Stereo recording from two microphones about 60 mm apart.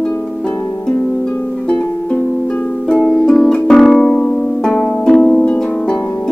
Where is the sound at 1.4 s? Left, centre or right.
Left.